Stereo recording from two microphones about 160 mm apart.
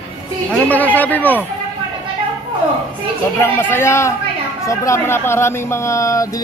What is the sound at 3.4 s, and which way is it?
Speech, 15° left (ahead or behind).